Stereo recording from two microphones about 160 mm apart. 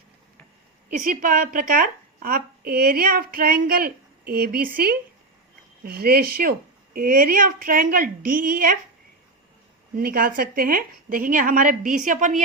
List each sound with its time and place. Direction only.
0.9 s speech: 55° right (ahead or behind)
9.9 s speech: 65° right (ahead or behind)